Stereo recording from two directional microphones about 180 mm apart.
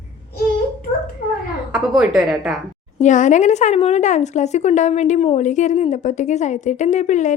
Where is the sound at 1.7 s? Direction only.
5° right (ahead or behind).